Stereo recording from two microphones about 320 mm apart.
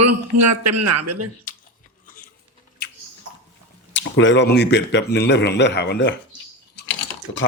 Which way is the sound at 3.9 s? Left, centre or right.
Left.